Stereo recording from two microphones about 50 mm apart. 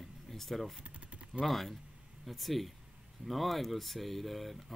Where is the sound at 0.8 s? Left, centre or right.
Right.